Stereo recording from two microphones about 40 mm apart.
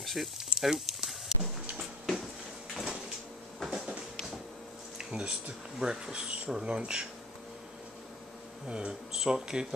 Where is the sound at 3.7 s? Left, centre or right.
Right.